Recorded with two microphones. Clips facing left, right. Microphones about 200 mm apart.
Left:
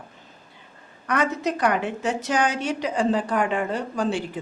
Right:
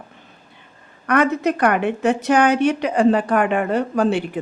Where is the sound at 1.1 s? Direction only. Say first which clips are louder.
Right 6 dB; 60° right (ahead or behind).